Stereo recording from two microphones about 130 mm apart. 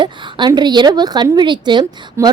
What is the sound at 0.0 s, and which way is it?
Speech, 35° right (ahead or behind).